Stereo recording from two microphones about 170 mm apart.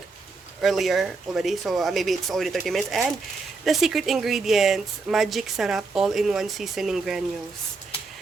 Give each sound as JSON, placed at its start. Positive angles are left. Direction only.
{"t": 0.6, "sound": "speech", "side_deg": 0}